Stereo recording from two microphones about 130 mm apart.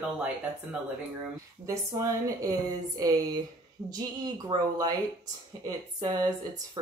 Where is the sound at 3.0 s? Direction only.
30° right (ahead or behind).